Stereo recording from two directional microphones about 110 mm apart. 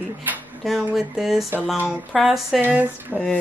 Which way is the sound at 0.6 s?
Centre (ahead or behind).